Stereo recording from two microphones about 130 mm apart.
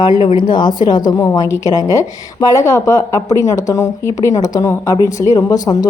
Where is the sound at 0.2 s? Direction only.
35° left (ahead or behind).